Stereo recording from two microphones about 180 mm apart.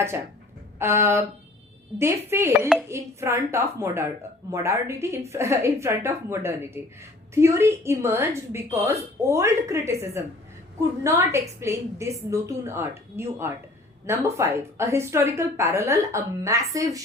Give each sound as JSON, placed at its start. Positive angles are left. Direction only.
{"t": 0.8, "sound": "a woman's voice", "side_deg": -15}